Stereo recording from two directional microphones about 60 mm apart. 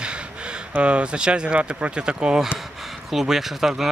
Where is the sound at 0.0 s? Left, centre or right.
Centre.